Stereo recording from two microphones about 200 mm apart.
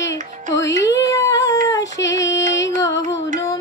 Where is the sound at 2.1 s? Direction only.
15° left (ahead or behind).